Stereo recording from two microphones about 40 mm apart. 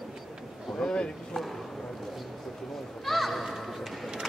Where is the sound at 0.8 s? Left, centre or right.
Left.